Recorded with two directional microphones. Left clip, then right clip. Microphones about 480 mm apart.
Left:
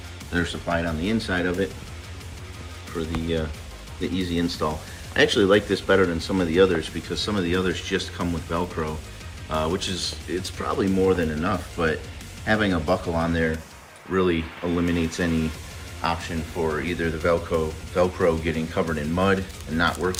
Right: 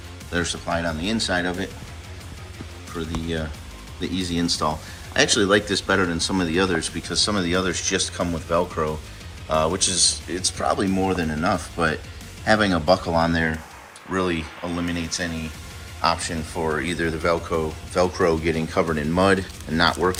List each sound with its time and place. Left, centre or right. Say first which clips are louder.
0.3 s speech: right 1 dB; centre
3.0 s speech: left 1 dB; centre